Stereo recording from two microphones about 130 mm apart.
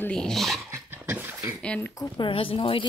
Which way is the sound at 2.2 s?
45° left (ahead or behind).